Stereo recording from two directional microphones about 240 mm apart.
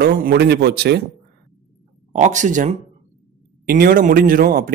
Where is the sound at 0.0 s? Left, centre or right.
Right.